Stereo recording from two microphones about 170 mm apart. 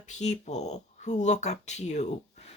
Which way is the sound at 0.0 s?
40° left (ahead or behind).